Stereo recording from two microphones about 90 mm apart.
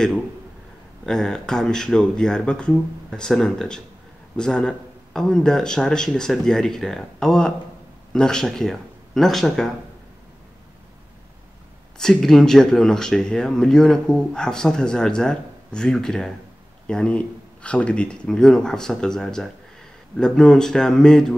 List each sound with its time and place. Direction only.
1.0 s speech: 5° left (ahead or behind)
12.0 s speech: 5° left (ahead or behind)